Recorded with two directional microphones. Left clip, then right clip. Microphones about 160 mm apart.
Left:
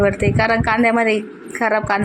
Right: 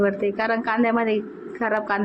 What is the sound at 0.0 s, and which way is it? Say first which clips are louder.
A woman's voice: left 5 dB; 25° left (ahead or behind).